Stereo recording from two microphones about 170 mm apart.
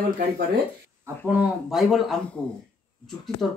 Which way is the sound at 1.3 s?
Centre (ahead or behind).